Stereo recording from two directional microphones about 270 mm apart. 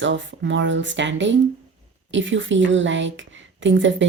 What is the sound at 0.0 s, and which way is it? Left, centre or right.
Speech, right.